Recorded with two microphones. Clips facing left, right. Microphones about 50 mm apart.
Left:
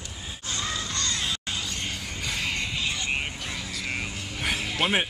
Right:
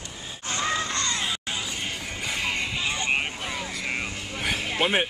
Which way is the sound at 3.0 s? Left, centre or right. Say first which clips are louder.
Right 3 dB; right.